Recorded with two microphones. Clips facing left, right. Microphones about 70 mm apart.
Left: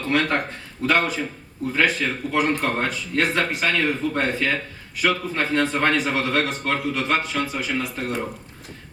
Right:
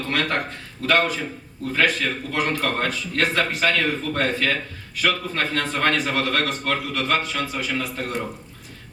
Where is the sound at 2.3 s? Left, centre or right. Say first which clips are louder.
Left 3 dB; centre.